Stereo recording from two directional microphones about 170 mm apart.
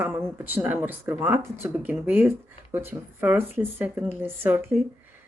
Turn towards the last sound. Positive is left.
turn(degrees=-15)  # may be behind; listen again after turning